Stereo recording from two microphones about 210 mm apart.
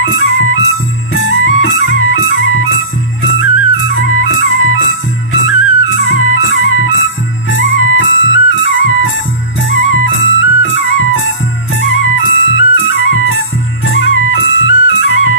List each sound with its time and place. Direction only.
0.0 s music: 70° left (ahead or behind)